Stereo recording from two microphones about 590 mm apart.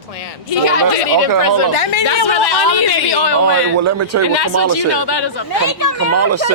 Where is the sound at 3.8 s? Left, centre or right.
Right.